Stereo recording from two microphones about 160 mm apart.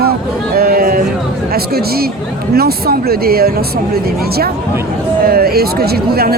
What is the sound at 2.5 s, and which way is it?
Speech, 75° right (ahead or behind).